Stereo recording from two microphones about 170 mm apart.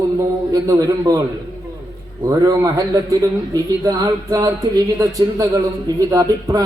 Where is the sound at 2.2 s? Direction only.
20° right (ahead or behind).